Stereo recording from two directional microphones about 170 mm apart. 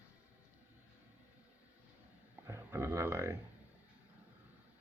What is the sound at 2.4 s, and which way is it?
Speech, 15° right (ahead or behind).